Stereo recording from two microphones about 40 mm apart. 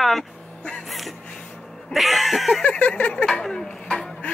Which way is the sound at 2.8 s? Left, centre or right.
Left.